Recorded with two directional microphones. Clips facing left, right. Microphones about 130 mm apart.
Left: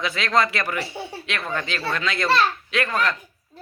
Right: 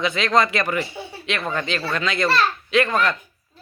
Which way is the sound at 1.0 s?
35° left (ahead or behind).